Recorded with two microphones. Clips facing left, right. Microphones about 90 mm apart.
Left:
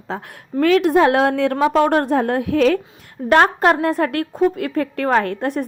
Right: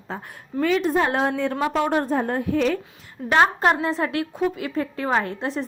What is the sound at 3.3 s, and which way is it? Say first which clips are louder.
A woman's voice: left 4 dB; 55° left (ahead or behind).